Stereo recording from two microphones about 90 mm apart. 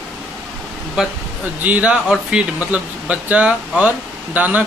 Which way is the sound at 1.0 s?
10° right (ahead or behind).